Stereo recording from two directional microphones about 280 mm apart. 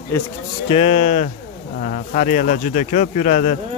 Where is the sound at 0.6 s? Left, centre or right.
Left.